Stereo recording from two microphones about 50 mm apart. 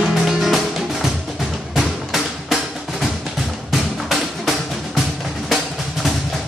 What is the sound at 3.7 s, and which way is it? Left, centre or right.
Music, centre.